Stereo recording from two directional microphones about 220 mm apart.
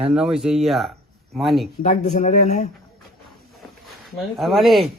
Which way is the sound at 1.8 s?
35° left (ahead or behind).